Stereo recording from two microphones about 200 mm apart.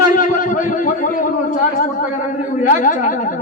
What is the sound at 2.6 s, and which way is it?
Speech, 40° left (ahead or behind).